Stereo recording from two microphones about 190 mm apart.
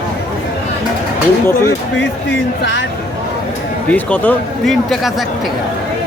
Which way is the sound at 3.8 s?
10° left (ahead or behind).